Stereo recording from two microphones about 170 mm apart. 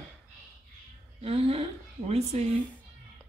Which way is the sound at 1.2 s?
35° right (ahead or behind).